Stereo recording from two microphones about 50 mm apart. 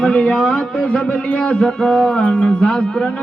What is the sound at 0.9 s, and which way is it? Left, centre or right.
Music, left.